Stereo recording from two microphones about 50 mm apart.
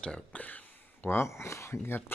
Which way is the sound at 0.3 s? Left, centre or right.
Left.